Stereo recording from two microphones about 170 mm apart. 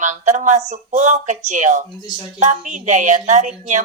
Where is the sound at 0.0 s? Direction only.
45° right (ahead or behind).